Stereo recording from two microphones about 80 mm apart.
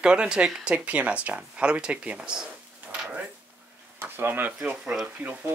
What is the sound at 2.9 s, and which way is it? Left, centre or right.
Drawer open or close, centre.